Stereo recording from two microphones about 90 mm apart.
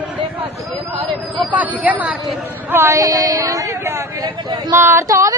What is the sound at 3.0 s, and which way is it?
Speech, 40° right (ahead or behind).